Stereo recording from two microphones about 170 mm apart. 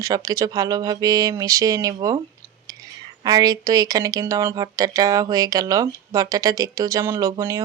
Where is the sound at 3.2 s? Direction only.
25° right (ahead or behind).